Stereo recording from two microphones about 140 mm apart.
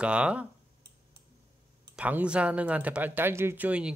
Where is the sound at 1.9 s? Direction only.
10° right (ahead or behind).